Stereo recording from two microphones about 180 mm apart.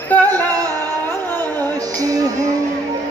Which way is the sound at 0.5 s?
20° right (ahead or behind).